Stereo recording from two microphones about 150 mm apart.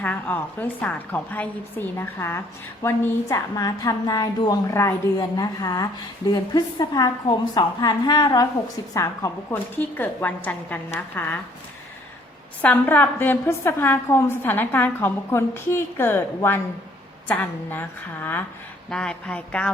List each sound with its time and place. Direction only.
0.0 s a woman's voice: 10° left (ahead or behind)
12.6 s a woman's voice: 15° left (ahead or behind)